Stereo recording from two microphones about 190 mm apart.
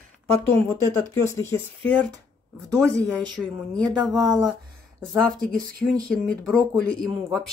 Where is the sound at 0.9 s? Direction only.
15° left (ahead or behind).